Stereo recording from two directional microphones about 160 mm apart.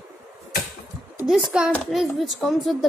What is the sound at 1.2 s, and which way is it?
A woman's voice, 5° right (ahead or behind).